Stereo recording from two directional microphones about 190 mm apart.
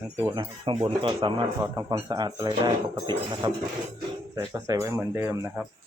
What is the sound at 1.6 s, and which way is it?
Speech, 15° right (ahead or behind).